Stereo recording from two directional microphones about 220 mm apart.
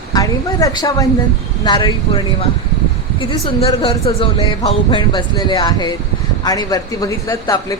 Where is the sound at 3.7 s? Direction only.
25° left (ahead or behind).